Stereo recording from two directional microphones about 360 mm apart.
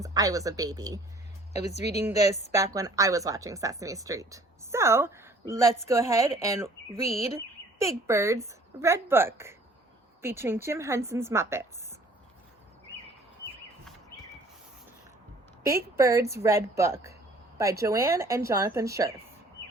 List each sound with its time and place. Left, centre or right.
0.0 s speech: centre
1.5 s speech: centre
2.5 s speech: centre
7.0 s speech: centre
7.9 s speech: centre
15.6 s speech: centre